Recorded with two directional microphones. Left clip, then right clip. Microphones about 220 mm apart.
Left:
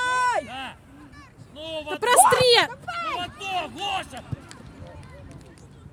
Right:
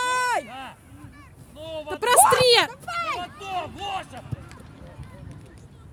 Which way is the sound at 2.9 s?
45° right (ahead or behind).